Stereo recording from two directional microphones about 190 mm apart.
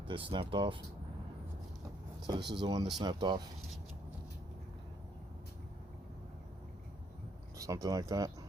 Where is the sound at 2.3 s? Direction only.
25° right (ahead or behind).